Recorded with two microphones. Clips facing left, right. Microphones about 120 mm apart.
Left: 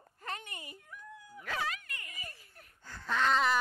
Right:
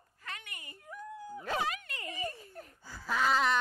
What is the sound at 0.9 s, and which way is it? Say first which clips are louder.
Dog: right 12 dB; 35° right (ahead or behind).